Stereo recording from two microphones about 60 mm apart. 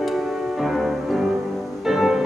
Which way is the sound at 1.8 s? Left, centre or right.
Centre.